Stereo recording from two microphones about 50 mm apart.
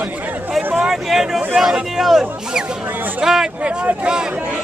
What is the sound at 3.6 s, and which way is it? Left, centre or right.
Speech, right.